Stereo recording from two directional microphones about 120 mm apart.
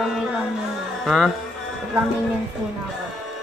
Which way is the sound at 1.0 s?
Centre (ahead or behind).